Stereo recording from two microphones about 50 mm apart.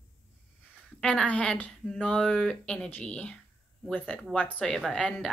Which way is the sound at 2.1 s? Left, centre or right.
Centre.